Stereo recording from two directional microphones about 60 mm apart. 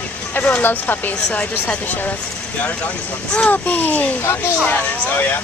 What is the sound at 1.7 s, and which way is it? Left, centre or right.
Speech, left.